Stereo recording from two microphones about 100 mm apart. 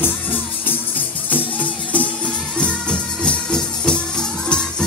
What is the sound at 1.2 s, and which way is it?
Music, 15° left (ahead or behind).